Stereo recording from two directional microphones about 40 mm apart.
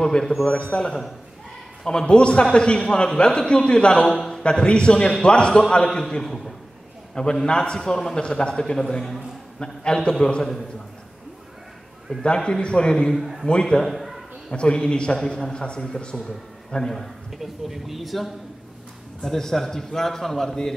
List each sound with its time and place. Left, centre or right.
0.0 s a man's voice: centre
4.4 s a man's voice: left; by 6.5 s centre
7.4 s a man's voice: left
8.7 s a man's voice: centre
12.4 s a man's voice: centre
13.8 s a sound: centre
14.5 s a man's voice: left
16.7 s a man's voice: centre
17.4 s speech: centre
19.2 s a man's voice: centre